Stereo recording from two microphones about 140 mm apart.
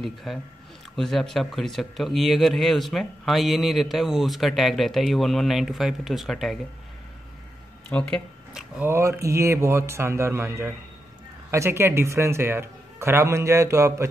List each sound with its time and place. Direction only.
0.0 s speech: centre (ahead or behind)
7.9 s speech: 10° left (ahead or behind)
8.5 s speech: 15° right (ahead or behind)